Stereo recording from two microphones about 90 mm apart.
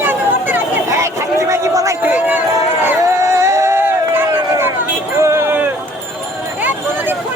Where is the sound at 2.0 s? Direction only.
20° right (ahead or behind).